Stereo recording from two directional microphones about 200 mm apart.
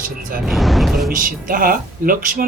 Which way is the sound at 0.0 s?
45° right (ahead or behind).